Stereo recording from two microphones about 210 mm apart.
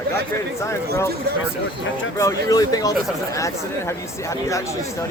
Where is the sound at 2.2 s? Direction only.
15° left (ahead or behind).